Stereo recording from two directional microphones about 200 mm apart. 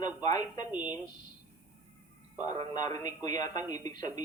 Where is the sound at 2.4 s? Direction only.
20° left (ahead or behind).